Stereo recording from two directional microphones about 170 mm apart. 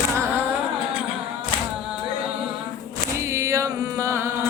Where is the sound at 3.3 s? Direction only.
15° right (ahead or behind).